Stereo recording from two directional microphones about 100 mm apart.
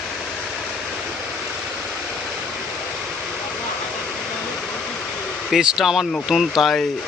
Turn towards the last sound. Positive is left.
turn(degrees=5)  # may be behind; listen again after turning